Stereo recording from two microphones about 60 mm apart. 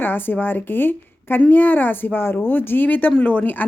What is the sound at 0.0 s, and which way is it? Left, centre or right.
Speech, left.